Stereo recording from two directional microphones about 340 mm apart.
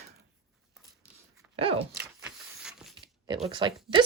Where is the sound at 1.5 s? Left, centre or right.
Centre.